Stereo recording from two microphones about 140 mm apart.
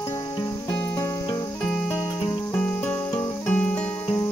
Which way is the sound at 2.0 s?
20° left (ahead or behind).